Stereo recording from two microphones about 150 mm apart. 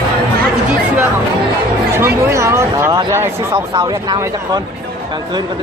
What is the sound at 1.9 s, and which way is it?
Speech, 15° right (ahead or behind).